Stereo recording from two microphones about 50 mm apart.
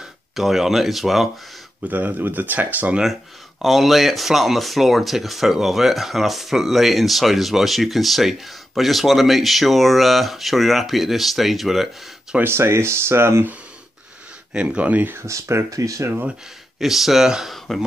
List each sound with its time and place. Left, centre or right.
0.4 s speech: centre
1.9 s speech: right
3.6 s speech: centre
12.4 s speech: right
14.5 s speech: centre
14.8 s speech: right
15.1 s speech: right
16.8 s speech: centre